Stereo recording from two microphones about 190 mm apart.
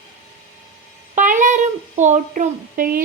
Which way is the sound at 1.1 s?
45° right (ahead or behind).